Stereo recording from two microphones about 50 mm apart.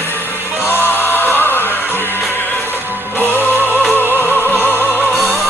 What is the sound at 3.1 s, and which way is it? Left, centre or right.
Music, left.